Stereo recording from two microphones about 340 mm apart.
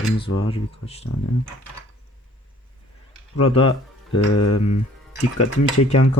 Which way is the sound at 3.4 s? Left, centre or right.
Centre.